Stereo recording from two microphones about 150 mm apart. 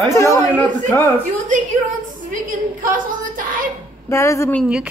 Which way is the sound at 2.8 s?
60° right (ahead or behind).